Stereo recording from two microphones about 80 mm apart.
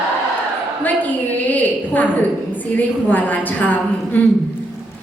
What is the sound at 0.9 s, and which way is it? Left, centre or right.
A woman's voice, left.